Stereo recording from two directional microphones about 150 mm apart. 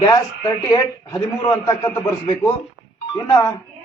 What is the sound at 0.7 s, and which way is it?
A man's voice, 25° left (ahead or behind).